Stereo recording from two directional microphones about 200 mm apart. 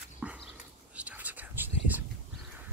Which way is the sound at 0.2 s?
5° right (ahead or behind).